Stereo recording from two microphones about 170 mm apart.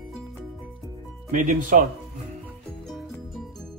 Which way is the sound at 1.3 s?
50° right (ahead or behind).